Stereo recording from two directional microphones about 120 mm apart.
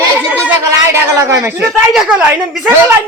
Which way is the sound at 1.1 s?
25° right (ahead or behind).